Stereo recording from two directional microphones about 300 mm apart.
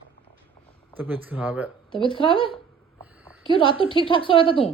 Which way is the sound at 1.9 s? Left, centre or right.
Centre.